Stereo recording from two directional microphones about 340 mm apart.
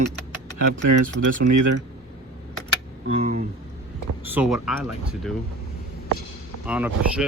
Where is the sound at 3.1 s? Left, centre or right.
Centre.